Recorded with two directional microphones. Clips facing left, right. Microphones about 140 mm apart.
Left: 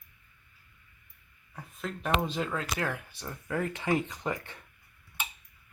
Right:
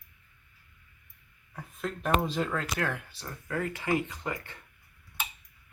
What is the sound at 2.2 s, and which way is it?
Speech, centre (ahead or behind).